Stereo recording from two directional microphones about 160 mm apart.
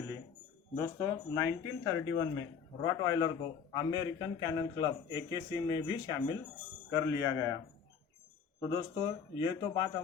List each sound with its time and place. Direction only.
0.8 s a man's voice: 20° left (ahead or behind)
8.6 s a man's voice: 30° left (ahead or behind)